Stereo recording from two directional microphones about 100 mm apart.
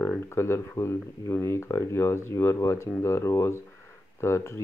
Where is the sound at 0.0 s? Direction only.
25° left (ahead or behind).